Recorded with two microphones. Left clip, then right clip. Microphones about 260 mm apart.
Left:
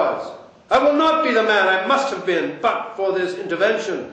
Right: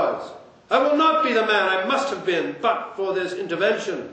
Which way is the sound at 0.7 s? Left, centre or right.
Right.